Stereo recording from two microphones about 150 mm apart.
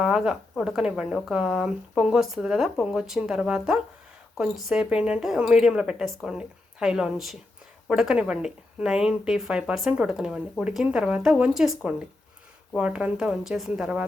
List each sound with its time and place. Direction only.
0.0 s speech: 5° right (ahead or behind)